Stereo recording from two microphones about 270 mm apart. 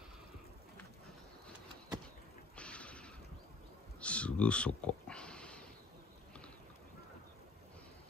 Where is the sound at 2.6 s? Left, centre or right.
Centre.